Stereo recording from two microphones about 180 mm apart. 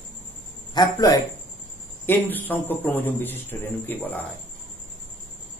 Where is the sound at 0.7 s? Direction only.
20° left (ahead or behind).